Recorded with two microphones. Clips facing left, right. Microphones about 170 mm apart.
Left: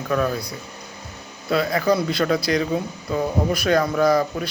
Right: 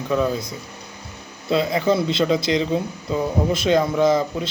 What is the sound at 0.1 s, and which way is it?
Speech, 20° right (ahead or behind).